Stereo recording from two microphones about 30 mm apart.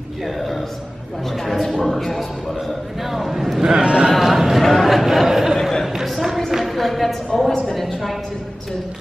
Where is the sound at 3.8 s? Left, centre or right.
Right.